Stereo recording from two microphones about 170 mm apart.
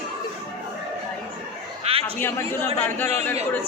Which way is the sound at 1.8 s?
35° right (ahead or behind).